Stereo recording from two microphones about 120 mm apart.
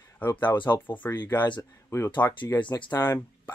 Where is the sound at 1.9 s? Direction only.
25° left (ahead or behind).